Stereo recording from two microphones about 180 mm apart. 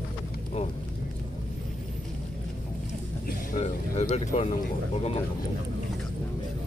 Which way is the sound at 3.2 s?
40° left (ahead or behind).